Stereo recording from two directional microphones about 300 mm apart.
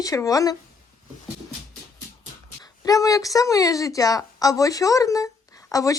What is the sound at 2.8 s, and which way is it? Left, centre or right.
A woman's voice, centre.